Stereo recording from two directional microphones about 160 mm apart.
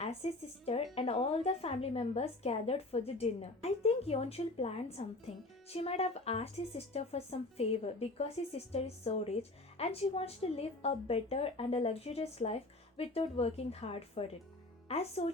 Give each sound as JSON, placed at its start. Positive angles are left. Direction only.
{"t": 0.0, "sound": "speech", "side_deg": 40}